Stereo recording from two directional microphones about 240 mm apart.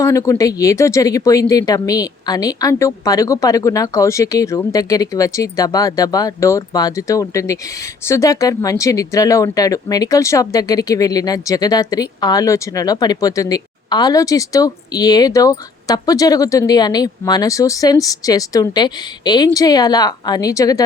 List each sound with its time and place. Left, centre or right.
0.0 s speech: centre